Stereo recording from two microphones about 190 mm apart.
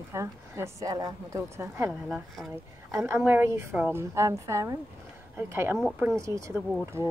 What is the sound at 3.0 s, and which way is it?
Speech, 10° right (ahead or behind).